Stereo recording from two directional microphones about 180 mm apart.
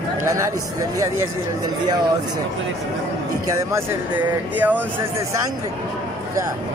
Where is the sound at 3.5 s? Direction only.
15° right (ahead or behind).